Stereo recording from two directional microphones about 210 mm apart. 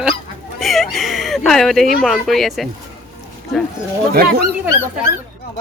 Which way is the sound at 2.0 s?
Centre (ahead or behind).